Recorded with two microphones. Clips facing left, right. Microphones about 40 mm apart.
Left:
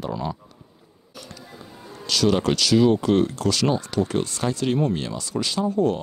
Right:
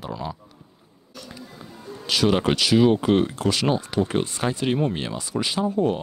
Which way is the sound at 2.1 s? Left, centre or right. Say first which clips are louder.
Even; centre.